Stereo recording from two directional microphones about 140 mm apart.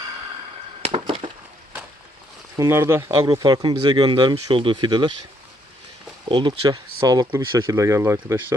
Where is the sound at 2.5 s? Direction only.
20° right (ahead or behind).